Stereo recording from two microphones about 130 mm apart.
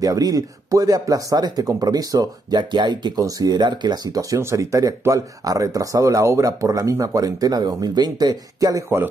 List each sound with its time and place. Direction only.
0.0 s speech: 30° right (ahead or behind)